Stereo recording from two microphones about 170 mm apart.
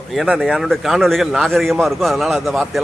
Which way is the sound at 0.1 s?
Centre (ahead or behind).